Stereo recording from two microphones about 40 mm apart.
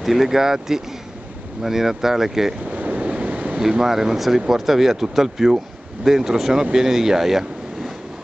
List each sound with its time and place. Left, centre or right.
0.0 s speech: centre
2.7 s waves: right
3.5 s speech: centre